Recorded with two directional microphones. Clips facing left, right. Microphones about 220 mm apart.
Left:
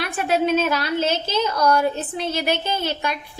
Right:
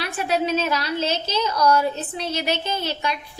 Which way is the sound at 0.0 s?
55° left (ahead or behind).